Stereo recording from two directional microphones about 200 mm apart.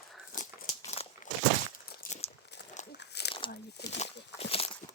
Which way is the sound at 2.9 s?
60° left (ahead or behind).